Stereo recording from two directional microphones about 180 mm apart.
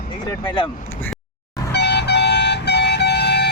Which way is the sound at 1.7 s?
70° left (ahead or behind).